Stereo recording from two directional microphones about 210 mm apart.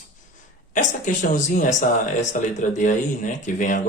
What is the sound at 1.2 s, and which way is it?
Speech, 35° left (ahead or behind).